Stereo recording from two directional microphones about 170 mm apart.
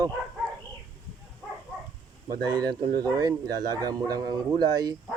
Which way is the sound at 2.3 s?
25° right (ahead or behind).